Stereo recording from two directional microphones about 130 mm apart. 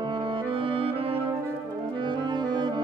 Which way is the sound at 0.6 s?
45° right (ahead or behind).